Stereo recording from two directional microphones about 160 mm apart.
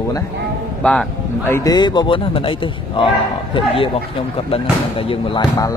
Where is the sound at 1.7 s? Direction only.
30° left (ahead or behind).